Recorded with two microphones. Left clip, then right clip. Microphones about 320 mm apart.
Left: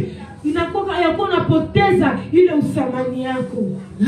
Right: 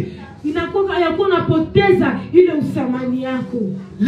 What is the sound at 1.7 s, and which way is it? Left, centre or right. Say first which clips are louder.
Music: right 2 dB; left.